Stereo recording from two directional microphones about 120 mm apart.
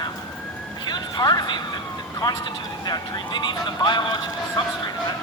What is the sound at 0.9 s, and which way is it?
Speech, 35° left (ahead or behind).